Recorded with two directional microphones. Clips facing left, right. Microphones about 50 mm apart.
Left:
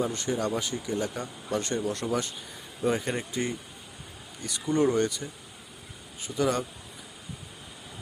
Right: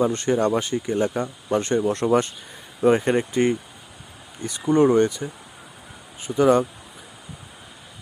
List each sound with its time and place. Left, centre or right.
0.0 s speech: right